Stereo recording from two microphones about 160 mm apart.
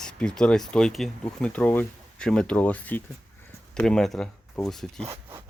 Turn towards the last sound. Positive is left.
turn(degrees=-15)  # may be behind; listen again after turning